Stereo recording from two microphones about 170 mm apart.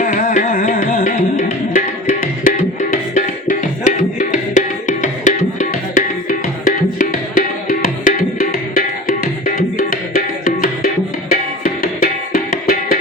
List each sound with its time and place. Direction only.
0.0 s music: 50° left (ahead or behind)